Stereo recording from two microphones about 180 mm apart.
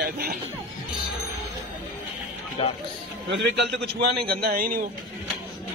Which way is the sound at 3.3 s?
75° right (ahead or behind).